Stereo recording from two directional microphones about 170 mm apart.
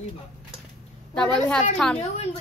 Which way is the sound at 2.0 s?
40° left (ahead or behind).